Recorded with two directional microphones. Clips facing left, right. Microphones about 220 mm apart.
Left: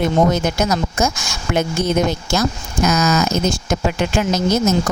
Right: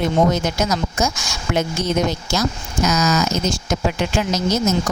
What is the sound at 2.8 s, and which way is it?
Speech, 55° left (ahead or behind).